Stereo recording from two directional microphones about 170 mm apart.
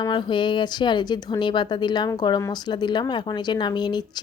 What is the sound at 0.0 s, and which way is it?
Speech, 30° left (ahead or behind).